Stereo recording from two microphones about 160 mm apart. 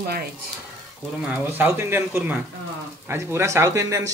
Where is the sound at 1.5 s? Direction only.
15° right (ahead or behind).